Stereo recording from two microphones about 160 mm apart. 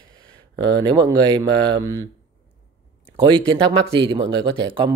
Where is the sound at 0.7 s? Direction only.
30° right (ahead or behind).